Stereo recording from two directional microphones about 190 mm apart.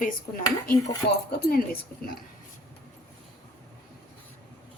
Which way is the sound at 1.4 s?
50° left (ahead or behind).